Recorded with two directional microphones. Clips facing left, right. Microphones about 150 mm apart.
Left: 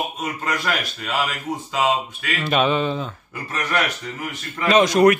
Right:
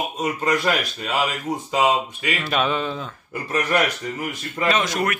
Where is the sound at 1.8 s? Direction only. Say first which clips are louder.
Right 1 dB; 10° right (ahead or behind).